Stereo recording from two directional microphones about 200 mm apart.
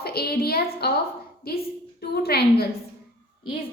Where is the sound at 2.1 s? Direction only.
50° left (ahead or behind).